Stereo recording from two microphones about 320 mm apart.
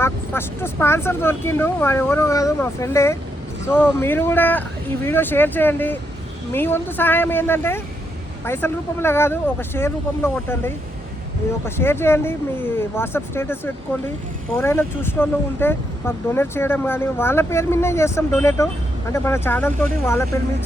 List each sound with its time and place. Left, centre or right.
0.0 s speech: centre
11.6 s speech: centre